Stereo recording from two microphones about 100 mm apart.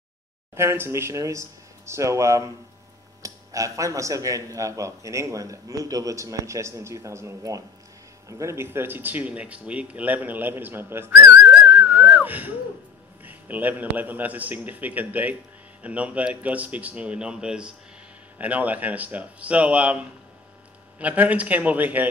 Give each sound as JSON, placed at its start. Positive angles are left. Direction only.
{"t": 0.6, "sound": "speech", "side_deg": -25}
{"t": 11.4, "sound": "whistling", "side_deg": -10}
{"t": 13.2, "sound": "a man's voice", "side_deg": -15}